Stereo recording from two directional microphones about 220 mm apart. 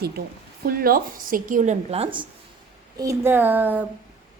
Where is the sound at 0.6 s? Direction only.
40° right (ahead or behind); by 2.2 s 25° right (ahead or behind).